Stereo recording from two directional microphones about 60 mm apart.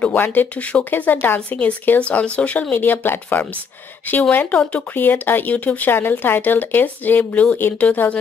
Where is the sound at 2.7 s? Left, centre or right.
Left.